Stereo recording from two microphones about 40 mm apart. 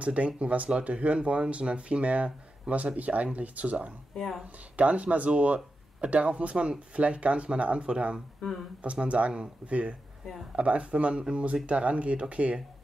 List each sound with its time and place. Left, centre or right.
0.0 s speech: right
4.1 s speech: centre
4.7 s speech: right